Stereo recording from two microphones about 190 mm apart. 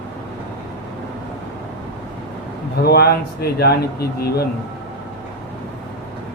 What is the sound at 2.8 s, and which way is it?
Speech, 55° left (ahead or behind).